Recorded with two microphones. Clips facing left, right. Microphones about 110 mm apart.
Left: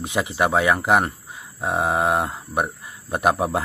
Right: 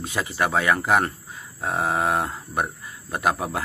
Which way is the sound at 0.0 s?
15° left (ahead or behind).